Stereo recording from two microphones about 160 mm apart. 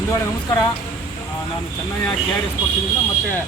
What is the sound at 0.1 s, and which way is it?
Speech, 25° left (ahead or behind).